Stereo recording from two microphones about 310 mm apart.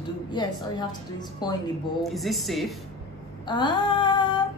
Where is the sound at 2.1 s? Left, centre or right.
Centre.